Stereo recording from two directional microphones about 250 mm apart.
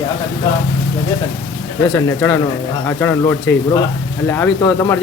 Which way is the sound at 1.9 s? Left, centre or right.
Centre.